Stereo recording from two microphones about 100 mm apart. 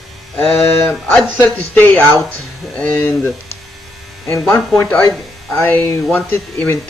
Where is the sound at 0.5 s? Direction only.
Centre (ahead or behind).